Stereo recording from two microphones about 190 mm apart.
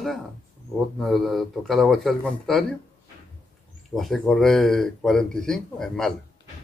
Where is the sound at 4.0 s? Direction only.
Centre (ahead or behind).